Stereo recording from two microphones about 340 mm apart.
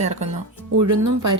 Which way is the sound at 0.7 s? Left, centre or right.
Right.